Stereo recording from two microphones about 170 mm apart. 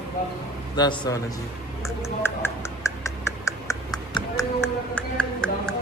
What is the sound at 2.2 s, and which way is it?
Speech, 15° left (ahead or behind).